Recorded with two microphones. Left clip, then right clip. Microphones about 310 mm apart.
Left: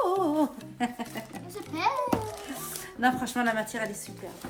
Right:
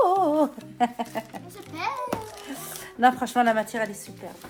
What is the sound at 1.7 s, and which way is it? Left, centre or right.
Speech, centre.